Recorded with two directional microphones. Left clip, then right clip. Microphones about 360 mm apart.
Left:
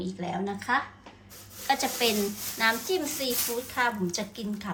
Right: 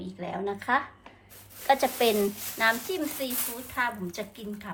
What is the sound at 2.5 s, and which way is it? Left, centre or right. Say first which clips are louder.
A woman's voice: even; centre.